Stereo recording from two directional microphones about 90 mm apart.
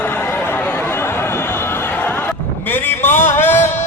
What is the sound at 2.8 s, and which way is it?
Music, 25° left (ahead or behind).